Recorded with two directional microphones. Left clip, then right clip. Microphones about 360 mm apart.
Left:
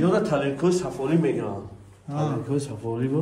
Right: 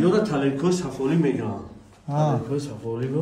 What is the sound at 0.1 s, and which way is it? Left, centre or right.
A man's voice, centre.